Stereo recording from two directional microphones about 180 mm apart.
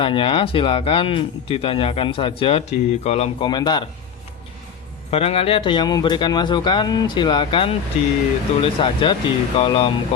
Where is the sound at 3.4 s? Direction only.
25° left (ahead or behind).